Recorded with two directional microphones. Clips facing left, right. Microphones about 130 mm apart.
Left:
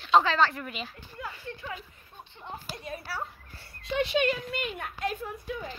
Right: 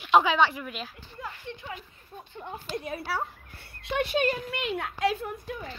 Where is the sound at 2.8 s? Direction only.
60° right (ahead or behind); by 4.3 s 45° right (ahead or behind).